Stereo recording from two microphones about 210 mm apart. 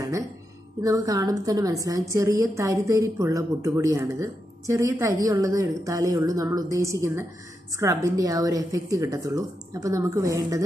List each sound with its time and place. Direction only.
0.8 s a woman's voice: 15° right (ahead or behind)